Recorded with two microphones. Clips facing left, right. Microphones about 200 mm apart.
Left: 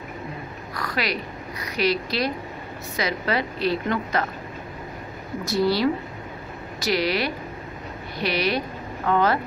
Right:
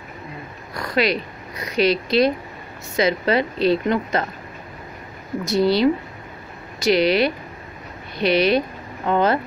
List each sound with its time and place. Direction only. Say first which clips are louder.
0.7 s oink: right 7 dB; 25° right (ahead or behind)
1.6 s a woman's voice: right 5 dB; 25° right (ahead or behind)
5.5 s a woman's voice: right 4 dB; 20° right (ahead or behind)